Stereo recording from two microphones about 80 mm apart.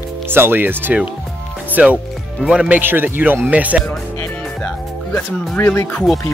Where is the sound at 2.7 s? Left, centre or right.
Right.